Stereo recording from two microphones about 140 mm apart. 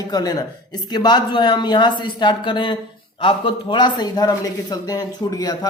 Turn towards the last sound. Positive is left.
turn(degrees=30)  # may be behind; listen again after turning